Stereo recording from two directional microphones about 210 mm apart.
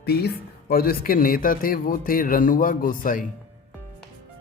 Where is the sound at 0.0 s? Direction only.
50° left (ahead or behind).